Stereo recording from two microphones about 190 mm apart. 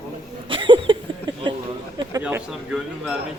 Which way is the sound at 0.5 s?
25° right (ahead or behind).